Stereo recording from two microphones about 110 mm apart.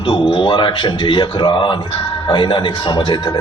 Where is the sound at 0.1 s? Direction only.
50° left (ahead or behind).